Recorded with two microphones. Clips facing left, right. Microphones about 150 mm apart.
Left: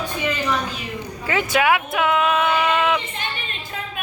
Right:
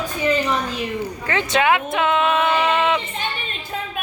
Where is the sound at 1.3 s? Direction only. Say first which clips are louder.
Even; 10° left (ahead or behind).